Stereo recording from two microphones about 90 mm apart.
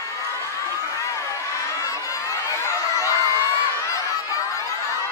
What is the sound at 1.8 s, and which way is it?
Crowd, 35° left (ahead or behind).